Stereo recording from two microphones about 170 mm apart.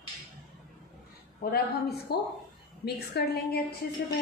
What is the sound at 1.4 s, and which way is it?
A woman's voice, 65° left (ahead or behind).